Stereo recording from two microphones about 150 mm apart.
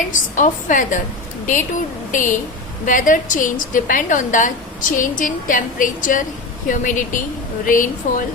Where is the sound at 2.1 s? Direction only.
60° left (ahead or behind).